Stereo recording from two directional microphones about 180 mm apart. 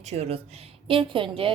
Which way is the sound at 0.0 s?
35° right (ahead or behind).